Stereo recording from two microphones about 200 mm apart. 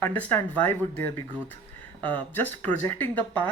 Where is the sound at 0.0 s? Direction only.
10° left (ahead or behind).